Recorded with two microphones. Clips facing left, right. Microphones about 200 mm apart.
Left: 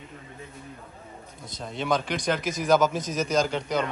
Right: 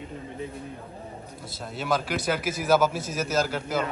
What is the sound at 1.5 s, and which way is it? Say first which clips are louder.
Speech: left 1 dB; 5° right (ahead or behind).